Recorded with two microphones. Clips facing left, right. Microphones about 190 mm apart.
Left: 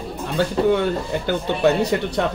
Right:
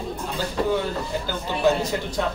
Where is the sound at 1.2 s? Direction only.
65° left (ahead or behind).